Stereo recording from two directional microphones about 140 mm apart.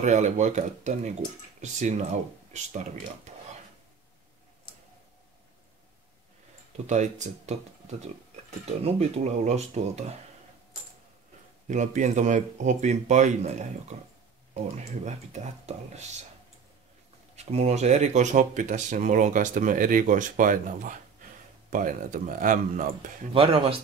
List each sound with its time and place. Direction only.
0.0 s speech: 60° right (ahead or behind)
3.3 s a sound: 55° right (ahead or behind)
6.9 s speech: 55° right (ahead or behind)
11.6 s speech: 60° right (ahead or behind)
17.5 s speech: 50° right (ahead or behind); by 23.1 s 70° right (ahead or behind)
23.3 s speech: 40° right (ahead or behind)